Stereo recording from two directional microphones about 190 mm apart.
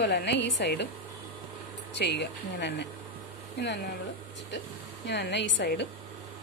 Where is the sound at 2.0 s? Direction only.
65° left (ahead or behind).